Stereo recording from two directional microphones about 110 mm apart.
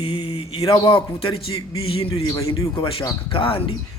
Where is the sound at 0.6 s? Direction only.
50° left (ahead or behind).